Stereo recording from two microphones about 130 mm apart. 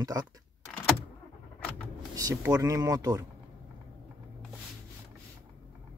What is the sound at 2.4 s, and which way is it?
Speech, 25° right (ahead or behind).